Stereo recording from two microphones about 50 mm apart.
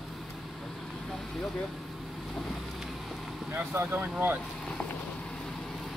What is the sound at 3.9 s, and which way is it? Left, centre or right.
Speech, right.